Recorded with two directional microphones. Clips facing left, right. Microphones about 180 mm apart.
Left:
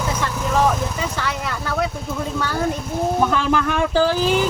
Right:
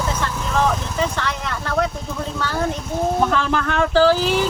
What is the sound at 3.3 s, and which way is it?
Speech, 10° left (ahead or behind).